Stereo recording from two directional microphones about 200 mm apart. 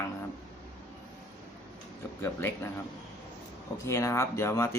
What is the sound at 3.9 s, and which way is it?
Speech, 15° left (ahead or behind).